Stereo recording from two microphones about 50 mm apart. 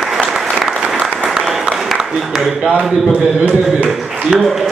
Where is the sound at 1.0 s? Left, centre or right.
Centre.